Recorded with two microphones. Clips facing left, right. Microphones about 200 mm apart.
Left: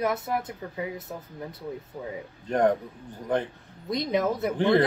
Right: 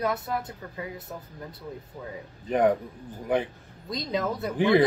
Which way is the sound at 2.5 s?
5° right (ahead or behind).